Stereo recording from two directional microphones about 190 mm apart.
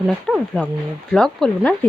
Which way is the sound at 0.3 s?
5° left (ahead or behind).